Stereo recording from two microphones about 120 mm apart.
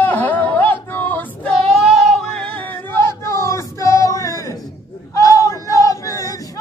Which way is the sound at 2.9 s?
25° left (ahead or behind).